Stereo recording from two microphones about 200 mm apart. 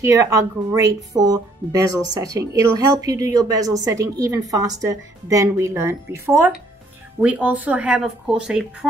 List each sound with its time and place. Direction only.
0.0 s speech: 15° right (ahead or behind)